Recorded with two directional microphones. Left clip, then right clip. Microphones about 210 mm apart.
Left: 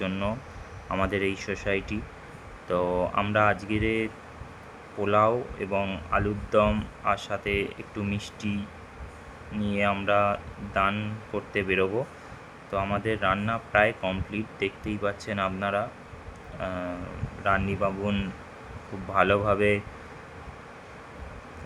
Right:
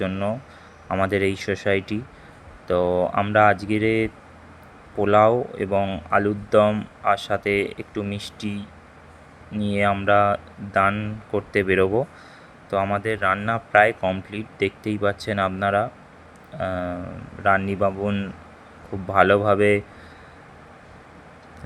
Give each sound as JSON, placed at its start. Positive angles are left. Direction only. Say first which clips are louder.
{"t": 0.0, "sound": "speech", "louder": "right 5 dB", "side_deg": -20}
{"t": 9.6, "sound": "speech", "louder": "right 6 dB", "side_deg": -25}